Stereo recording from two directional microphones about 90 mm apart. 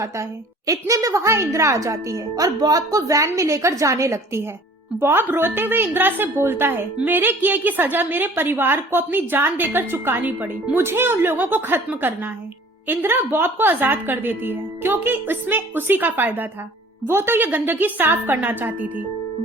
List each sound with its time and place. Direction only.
0.7 s a woman's voice: 40° right (ahead or behind); by 18.9 s 20° right (ahead or behind)